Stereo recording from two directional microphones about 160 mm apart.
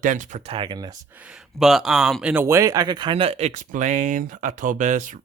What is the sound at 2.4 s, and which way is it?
Speech, 20° right (ahead or behind).